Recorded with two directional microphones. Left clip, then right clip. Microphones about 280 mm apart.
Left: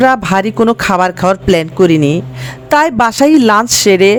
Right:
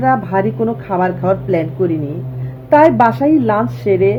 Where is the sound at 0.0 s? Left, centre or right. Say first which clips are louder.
Left 4 dB; left.